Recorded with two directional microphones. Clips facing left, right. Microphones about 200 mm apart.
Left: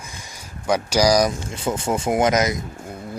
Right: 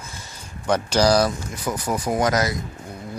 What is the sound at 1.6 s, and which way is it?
Speech, 25° left (ahead or behind).